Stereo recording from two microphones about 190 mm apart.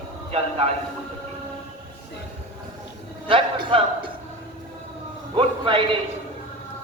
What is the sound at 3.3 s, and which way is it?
Speech, 25° right (ahead or behind).